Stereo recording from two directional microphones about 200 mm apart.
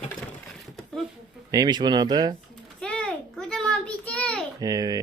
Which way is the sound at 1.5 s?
20° right (ahead or behind).